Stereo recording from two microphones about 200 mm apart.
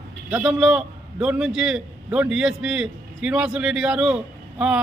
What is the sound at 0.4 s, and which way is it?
A man's voice, 5° right (ahead or behind).